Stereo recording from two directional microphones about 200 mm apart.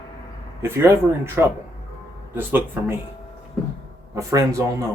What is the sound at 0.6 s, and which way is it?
Speech, 10° right (ahead or behind).